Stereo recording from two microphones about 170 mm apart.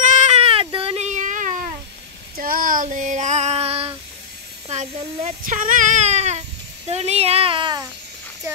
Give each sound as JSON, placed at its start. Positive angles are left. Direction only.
{"t": 0.0, "sound": "a sound", "side_deg": -45}
{"t": 2.3, "sound": "child singing", "side_deg": -55}
{"t": 4.6, "sound": "speech", "side_deg": -40}